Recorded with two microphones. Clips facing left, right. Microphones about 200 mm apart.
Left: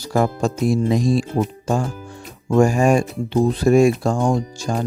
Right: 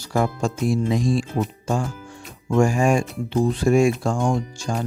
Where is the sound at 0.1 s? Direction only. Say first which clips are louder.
Left 3 dB; 40° left (ahead or behind).